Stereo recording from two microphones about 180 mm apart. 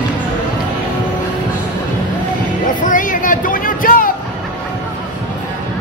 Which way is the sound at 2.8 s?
45° left (ahead or behind).